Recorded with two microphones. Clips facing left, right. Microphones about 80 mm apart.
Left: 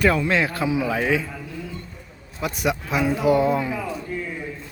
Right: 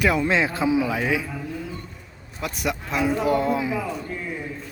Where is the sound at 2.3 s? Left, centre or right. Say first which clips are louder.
Left 3 dB; centre.